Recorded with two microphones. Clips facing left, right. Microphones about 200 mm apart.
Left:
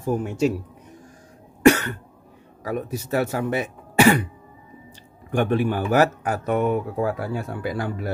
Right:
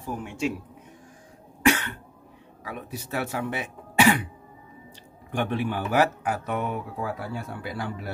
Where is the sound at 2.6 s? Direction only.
45° left (ahead or behind).